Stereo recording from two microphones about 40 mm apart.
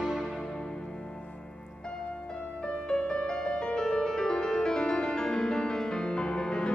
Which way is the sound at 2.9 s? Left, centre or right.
Centre.